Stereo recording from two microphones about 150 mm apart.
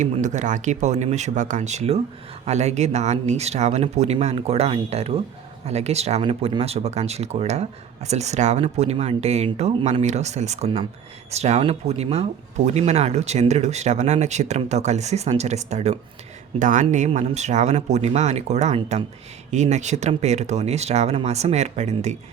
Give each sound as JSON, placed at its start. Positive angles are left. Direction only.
{"t": 0.0, "sound": "speech", "side_deg": -55}
{"t": 16.6, "sound": "speech", "side_deg": -60}
{"t": 17.1, "sound": "speech", "side_deg": -50}